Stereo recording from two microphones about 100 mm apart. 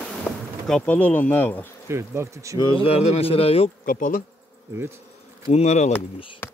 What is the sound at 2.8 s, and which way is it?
Speech, 80° left.